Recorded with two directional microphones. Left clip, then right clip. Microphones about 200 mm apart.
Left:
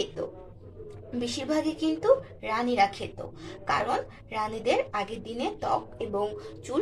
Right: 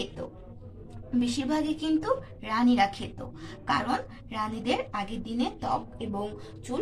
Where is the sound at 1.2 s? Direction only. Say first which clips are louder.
Left 1 dB; 15° left (ahead or behind).